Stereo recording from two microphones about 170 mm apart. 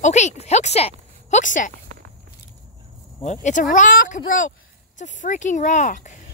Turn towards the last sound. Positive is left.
turn(degrees=45)  # may be behind; listen again after turning